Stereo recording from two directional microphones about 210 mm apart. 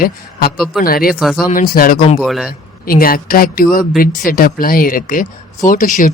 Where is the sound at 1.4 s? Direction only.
45° left (ahead or behind).